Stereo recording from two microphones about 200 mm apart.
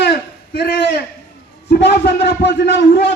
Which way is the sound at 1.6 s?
55° left (ahead or behind).